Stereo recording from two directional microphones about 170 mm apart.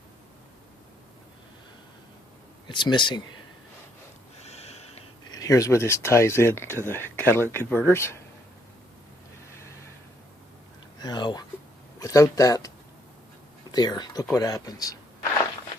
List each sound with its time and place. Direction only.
2.6 s speech: 25° left (ahead or behind)
4.4 s snort: 40° left (ahead or behind)
5.3 s speech: 20° left (ahead or behind)
11.0 s a sound: 25° left (ahead or behind)
11.9 s speech: 20° left (ahead or behind)